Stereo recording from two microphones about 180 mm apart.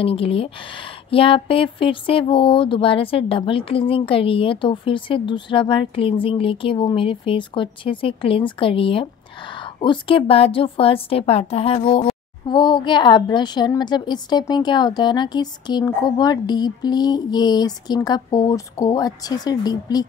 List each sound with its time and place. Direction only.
0.0 s speech: 30° left (ahead or behind)